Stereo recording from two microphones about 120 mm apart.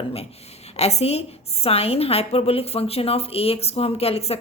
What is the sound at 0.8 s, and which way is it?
A woman's voice, 60° left (ahead or behind).